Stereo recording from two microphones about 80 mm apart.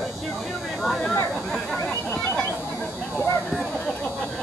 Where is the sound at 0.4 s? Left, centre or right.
Centre.